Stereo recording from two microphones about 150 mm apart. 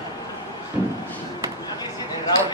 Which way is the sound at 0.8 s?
15° right (ahead or behind).